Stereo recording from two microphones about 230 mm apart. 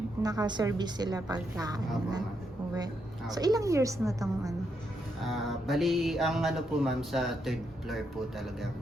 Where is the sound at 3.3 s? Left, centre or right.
Centre.